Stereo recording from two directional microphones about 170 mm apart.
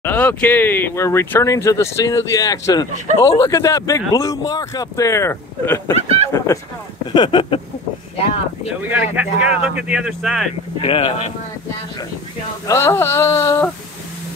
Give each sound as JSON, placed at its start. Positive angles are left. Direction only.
{"t": 0.0, "sound": "speech", "side_deg": 10}
{"t": 5.9, "sound": "speech", "side_deg": -35}
{"t": 6.3, "sound": "speech", "side_deg": 15}
{"t": 7.2, "sound": "speech", "side_deg": 30}
{"t": 8.8, "sound": "speech", "side_deg": -10}
{"t": 10.8, "sound": "speech", "side_deg": 35}
{"t": 12.6, "sound": "speech", "side_deg": 15}